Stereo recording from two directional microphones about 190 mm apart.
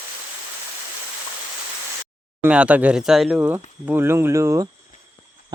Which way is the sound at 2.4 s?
5° right (ahead or behind).